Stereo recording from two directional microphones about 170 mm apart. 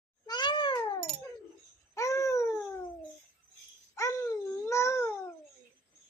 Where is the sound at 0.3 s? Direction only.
25° left (ahead or behind).